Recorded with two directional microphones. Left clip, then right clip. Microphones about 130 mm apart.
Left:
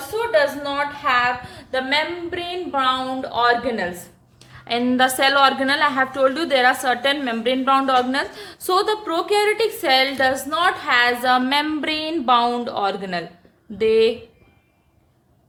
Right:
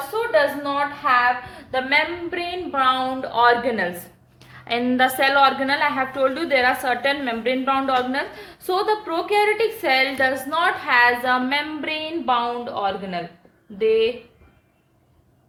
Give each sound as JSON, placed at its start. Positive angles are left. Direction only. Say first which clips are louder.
{"t": 0.3, "sound": "a woman's voice", "louder": "left 1 dB", "side_deg": 40}
{"t": 2.3, "sound": "a woman's voice", "louder": "even", "side_deg": 15}
{"t": 2.7, "sound": "a woman's voice", "louder": "right 1 dB", "side_deg": 5}
{"t": 4.6, "sound": "a woman's voice", "louder": "left 1 dB", "side_deg": 20}
{"t": 4.9, "sound": "a woman's voice", "louder": "left 1 dB", "side_deg": 30}
{"t": 11.3, "sound": "speech", "louder": "left 3 dB", "side_deg": 55}